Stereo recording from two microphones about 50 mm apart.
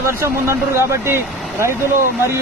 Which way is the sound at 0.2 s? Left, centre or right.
Right.